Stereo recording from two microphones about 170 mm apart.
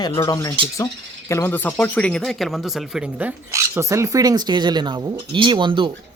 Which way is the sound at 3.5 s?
15° right (ahead or behind).